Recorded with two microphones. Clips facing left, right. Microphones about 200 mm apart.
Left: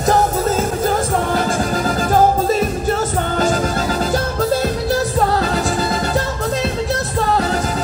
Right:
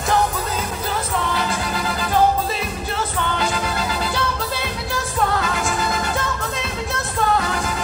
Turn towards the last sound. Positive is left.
turn(degrees=35)  # may be behind; listen again after turning